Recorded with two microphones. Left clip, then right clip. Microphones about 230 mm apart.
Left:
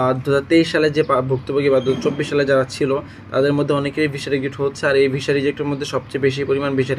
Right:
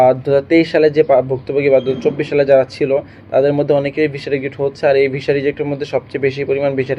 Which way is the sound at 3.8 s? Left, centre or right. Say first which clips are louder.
Right 3 dB; centre.